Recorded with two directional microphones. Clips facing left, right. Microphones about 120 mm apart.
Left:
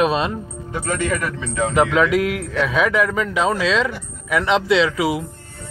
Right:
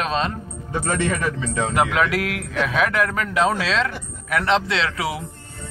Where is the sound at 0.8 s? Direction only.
25° right (ahead or behind).